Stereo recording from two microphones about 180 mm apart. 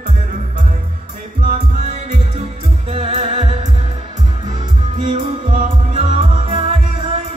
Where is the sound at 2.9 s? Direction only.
40° right (ahead or behind).